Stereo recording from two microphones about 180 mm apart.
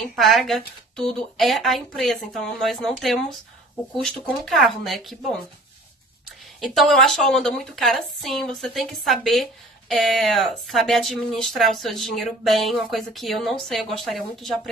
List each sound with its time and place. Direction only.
0.0 s a woman's voice: centre (ahead or behind)
6.6 s a woman's voice: centre (ahead or behind)